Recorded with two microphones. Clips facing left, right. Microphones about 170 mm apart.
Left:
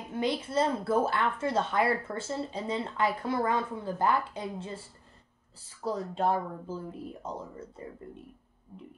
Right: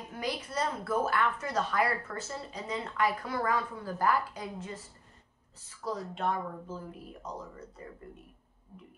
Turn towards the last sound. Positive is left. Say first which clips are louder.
# left 3 dB
turn(degrees=25)  # may be behind; listen again after turning